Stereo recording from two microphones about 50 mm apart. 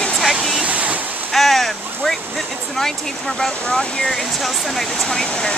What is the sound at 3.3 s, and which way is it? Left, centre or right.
Speech, centre.